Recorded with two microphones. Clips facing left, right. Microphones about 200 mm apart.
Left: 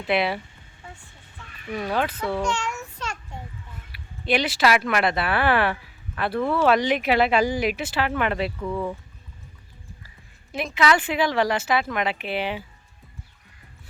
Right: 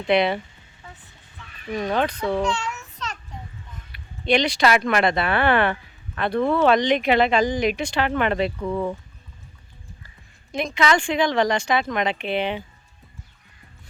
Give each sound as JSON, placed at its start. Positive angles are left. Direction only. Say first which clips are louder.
{"t": 0.1, "sound": "speech", "louder": "right 4 dB", "side_deg": 5}
{"t": 1.7, "sound": "speech", "louder": "right 2 dB", "side_deg": 5}
{"t": 3.9, "sound": "speech", "louder": "right 3 dB", "side_deg": 5}
{"t": 8.6, "sound": "speech", "louder": "right 2 dB", "side_deg": -20}
{"t": 10.5, "sound": "speech", "louder": "right 1 dB", "side_deg": 5}